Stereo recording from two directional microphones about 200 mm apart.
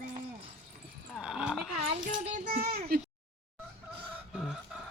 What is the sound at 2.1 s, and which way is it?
Speech, 40° right (ahead or behind).